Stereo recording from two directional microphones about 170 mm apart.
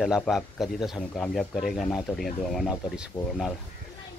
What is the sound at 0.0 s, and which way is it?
Speech, centre (ahead or behind).